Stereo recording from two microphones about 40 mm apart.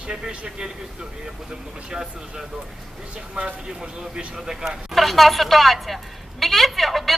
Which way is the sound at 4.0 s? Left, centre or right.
Centre.